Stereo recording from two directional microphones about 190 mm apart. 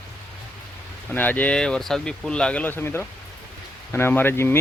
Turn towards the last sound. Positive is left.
turn(degrees=10)  # may be behind; listen again after turning